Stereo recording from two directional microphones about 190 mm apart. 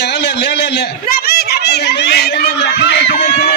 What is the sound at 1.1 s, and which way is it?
Speech, 55° left (ahead or behind).